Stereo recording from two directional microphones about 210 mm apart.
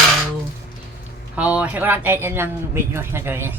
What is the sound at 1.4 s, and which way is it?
Speech, 5° right (ahead or behind).